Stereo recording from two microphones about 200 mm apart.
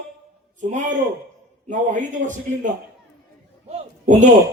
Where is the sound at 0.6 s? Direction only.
40° right (ahead or behind).